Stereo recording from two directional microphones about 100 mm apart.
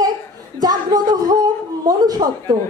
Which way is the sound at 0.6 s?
40° right (ahead or behind).